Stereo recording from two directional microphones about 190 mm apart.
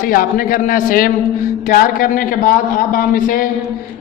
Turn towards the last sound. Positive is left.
turn(degrees=45)  # may be behind; listen again after turning